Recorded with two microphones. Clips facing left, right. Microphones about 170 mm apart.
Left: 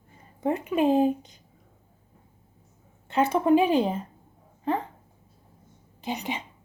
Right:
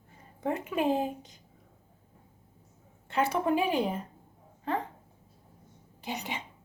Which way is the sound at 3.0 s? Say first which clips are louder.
Left 5 dB; 20° left (ahead or behind).